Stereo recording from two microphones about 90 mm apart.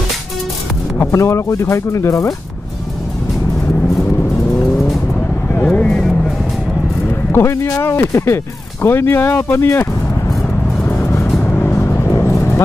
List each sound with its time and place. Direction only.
0.9 s speech: 30° left (ahead or behind)
5.7 s vehicle: 10° left (ahead or behind)
7.3 s speech: 30° left (ahead or behind)
10.9 s music: 30° left (ahead or behind)
11.4 s vehicle: 20° left (ahead or behind)